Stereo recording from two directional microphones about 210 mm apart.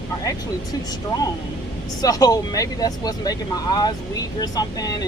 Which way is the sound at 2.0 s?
15° left (ahead or behind).